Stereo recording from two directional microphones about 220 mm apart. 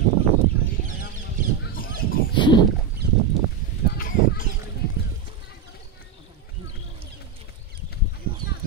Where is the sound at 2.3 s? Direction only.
20° left (ahead or behind).